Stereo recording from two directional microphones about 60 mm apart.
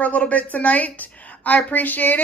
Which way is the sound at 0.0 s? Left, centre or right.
Left.